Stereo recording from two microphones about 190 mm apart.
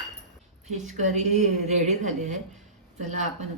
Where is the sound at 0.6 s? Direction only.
40° right (ahead or behind).